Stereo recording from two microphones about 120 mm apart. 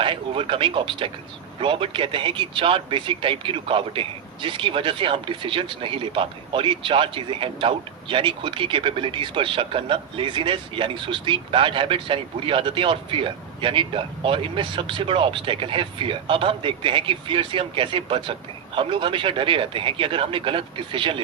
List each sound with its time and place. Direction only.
0.0 s speech: 45° right (ahead or behind)